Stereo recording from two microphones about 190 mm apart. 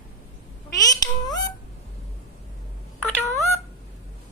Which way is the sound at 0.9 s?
20° left (ahead or behind).